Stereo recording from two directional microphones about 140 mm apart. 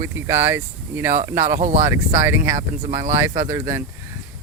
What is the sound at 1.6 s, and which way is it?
Speech, 60° right (ahead or behind).